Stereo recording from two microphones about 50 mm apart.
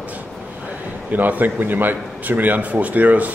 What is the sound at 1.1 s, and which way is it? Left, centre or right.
A man's voice, right.